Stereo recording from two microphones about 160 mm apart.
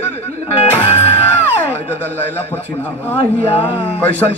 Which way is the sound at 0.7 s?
40° left (ahead or behind).